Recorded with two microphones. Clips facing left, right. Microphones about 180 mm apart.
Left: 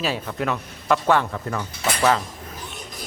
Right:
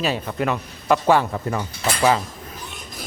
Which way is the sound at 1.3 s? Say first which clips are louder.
Right 3 dB; 15° right (ahead or behind).